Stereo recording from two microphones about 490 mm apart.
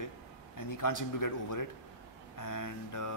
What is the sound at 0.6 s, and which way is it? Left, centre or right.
A man's voice, left.